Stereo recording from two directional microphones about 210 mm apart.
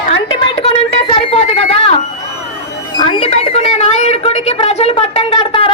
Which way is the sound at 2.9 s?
25° left (ahead or behind).